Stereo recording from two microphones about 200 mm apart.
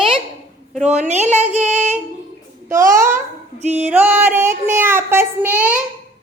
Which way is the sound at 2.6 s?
15° right (ahead or behind).